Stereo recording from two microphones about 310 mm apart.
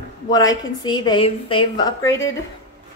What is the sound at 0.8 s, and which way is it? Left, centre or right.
A woman's voice, centre.